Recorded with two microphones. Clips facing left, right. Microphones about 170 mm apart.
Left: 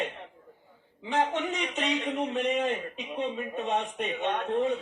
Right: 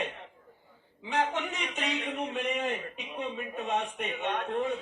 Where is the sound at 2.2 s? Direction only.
25° left (ahead or behind).